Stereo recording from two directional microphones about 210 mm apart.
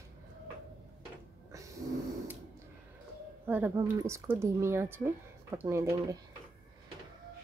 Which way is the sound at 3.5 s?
10° right (ahead or behind).